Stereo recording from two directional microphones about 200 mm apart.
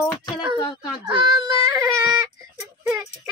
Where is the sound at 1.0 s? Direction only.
25° right (ahead or behind).